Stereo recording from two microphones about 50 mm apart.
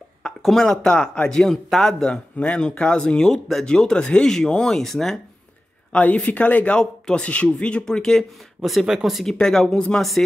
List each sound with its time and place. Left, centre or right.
0.4 s speech: centre
2.3 s speech: centre
5.9 s speech: left
6.8 s speech: centre
7.2 s speech: left
7.8 s speech: centre
8.8 s speech: centre
9.2 s speech: centre